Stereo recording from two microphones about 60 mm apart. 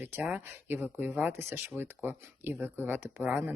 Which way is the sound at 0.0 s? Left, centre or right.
Right.